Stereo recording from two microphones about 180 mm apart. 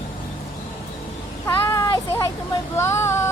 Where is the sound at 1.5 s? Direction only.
15° left (ahead or behind).